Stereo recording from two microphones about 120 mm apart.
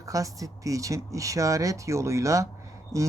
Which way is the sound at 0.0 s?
30° right (ahead or behind).